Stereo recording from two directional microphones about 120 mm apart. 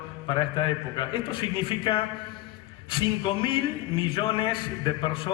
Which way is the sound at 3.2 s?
45° left (ahead or behind).